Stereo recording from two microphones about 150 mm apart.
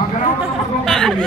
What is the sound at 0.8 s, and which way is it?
Speech, 5° left (ahead or behind).